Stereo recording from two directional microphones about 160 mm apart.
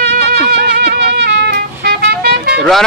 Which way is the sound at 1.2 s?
90° right.